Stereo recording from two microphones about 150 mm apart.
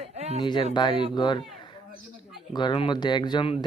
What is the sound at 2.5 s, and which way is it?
Speech, 35° left (ahead or behind).